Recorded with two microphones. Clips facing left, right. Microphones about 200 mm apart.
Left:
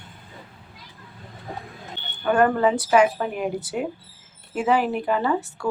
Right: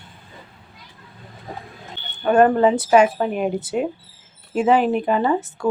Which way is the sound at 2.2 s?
25° right (ahead or behind).